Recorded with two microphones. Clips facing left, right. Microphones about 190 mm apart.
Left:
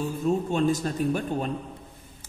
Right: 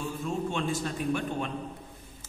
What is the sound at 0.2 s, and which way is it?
A man's voice, 40° left (ahead or behind).